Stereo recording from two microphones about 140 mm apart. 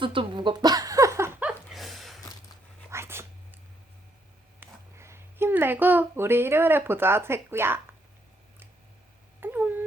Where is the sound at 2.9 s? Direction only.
20° right (ahead or behind).